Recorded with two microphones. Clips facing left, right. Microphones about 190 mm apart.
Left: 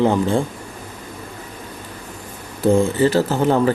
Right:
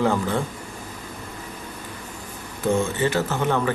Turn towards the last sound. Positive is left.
turn(degrees=35)  # may be behind; listen again after turning